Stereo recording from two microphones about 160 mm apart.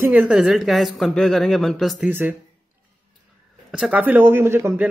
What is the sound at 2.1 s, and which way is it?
Speech, 10° right (ahead or behind).